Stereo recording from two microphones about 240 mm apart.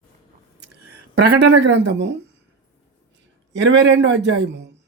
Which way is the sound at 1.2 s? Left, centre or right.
Right.